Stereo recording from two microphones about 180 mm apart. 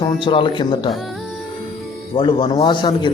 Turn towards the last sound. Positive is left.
turn(degrees=25)  # may be behind; listen again after turning